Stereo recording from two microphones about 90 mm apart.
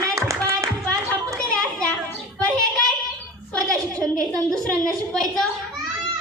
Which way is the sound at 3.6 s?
40° right (ahead or behind).